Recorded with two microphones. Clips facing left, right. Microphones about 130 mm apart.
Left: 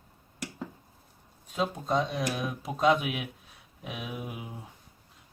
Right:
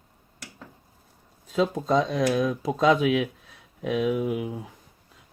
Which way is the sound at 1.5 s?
90° right.